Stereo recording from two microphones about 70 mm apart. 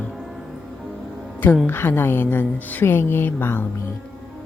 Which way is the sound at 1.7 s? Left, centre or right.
Left.